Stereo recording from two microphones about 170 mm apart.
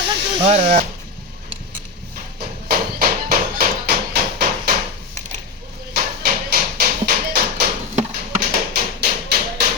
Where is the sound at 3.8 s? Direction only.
65° right (ahead or behind).